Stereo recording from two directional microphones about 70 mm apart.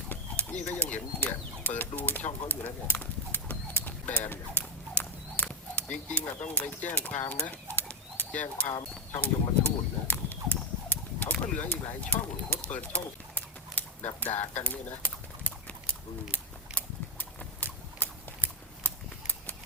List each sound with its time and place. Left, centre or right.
0.1 s a sound: left
9.2 s horse: left
11.6 s bird: left